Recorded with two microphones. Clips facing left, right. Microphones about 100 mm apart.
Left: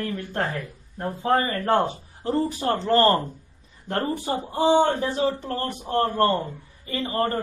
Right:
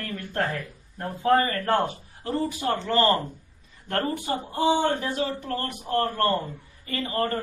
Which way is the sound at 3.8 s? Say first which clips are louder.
Left 1 dB; 30° left (ahead or behind).